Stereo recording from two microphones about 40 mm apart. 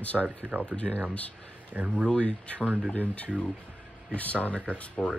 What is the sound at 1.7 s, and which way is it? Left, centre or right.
Speech, right.